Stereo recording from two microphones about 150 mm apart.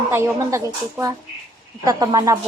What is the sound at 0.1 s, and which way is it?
Speech, 20° right (ahead or behind).